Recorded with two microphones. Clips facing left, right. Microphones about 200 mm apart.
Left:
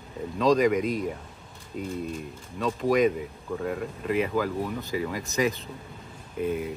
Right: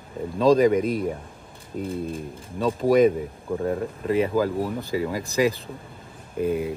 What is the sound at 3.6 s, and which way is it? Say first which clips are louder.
Speech: right 4 dB; 30° right (ahead or behind).